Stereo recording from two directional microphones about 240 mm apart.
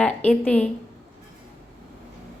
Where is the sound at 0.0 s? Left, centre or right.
Centre.